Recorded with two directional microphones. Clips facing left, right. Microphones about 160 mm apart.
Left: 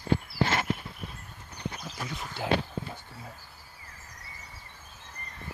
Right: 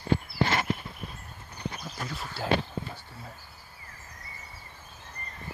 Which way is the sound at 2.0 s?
20° left (ahead or behind).